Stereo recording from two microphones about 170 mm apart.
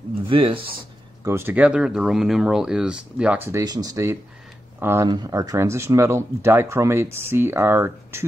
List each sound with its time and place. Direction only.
0.3 s speech: 30° right (ahead or behind)
1.2 s speech: 15° right (ahead or behind)